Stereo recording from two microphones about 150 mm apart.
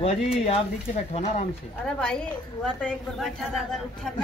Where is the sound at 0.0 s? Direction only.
40° left (ahead or behind).